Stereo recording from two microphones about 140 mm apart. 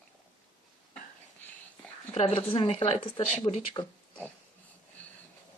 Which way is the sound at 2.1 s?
45° left (ahead or behind).